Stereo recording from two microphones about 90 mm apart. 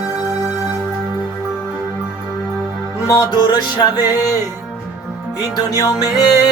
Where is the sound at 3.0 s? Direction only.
35° left (ahead or behind).